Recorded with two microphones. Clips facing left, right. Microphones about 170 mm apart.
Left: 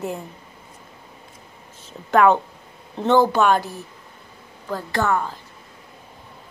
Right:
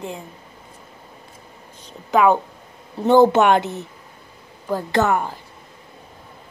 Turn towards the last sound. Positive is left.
turn(degrees=-20)  # may be behind; listen again after turning